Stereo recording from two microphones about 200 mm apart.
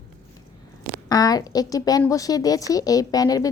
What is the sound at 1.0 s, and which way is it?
A woman's voice, 20° left (ahead or behind).